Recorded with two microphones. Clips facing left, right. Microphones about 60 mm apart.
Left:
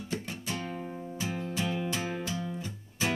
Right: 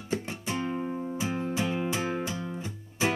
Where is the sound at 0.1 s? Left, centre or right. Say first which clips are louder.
Right 5 dB; right.